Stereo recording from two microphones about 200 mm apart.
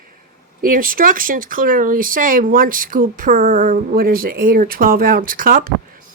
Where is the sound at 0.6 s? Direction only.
45° right (ahead or behind).